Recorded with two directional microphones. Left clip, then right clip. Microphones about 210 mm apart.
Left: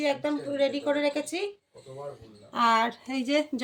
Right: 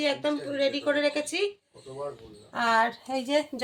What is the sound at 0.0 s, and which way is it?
A woman's voice, 5° left (ahead or behind).